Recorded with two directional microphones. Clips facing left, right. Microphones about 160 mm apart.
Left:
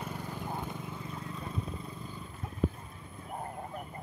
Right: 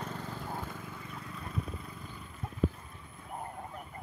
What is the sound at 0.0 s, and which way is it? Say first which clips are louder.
Vehicle: left 1 dB; 15° left (ahead or behind).